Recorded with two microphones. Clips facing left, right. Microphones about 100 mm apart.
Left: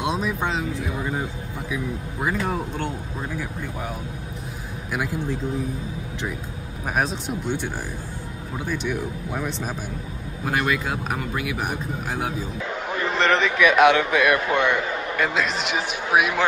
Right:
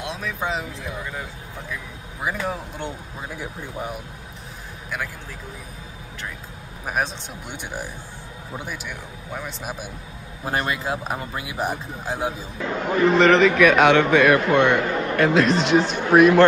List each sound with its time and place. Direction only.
0.4 s a man's voice: centre (ahead or behind)
2.2 s a man's voice: centre (ahead or behind)
3.3 s speech: 20° right (ahead or behind)
6.9 s a man's voice: centre (ahead or behind)
7.4 s speech: 15° right (ahead or behind)
8.6 s a man's voice: 5° right (ahead or behind)
10.4 s speech: 30° right (ahead or behind)
12.8 s a man's voice: centre (ahead or behind)